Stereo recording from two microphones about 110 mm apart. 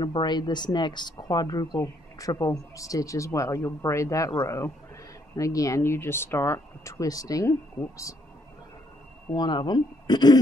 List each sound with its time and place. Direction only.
0.0 s speech: 40° left (ahead or behind)
9.3 s speech: 40° left (ahead or behind)